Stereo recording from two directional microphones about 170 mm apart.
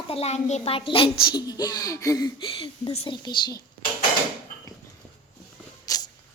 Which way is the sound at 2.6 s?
35° left (ahead or behind).